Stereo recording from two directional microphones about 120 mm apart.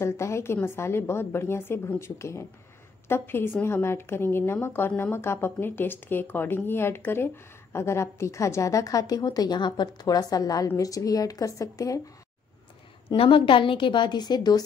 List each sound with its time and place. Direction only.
0.0 s a woman's voice: 25° left (ahead or behind)
13.1 s a woman's voice: 45° left (ahead or behind)